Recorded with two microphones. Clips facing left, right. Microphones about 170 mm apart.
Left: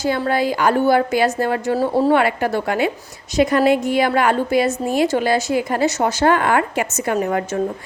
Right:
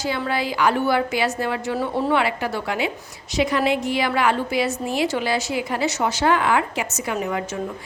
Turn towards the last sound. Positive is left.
turn(degrees=50)  # may be behind; listen again after turning